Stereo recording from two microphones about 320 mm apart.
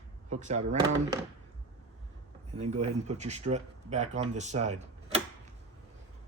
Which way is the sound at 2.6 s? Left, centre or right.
Right.